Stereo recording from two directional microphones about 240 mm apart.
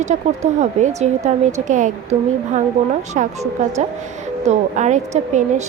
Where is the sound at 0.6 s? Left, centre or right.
Right.